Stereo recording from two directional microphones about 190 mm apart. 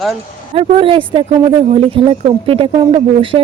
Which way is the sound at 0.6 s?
30° right (ahead or behind).